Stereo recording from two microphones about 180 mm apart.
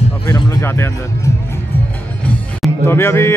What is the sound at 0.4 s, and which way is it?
Speech, 20° left (ahead or behind).